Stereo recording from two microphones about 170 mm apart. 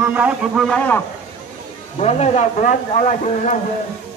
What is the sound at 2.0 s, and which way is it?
A man's voice, 40° left (ahead or behind).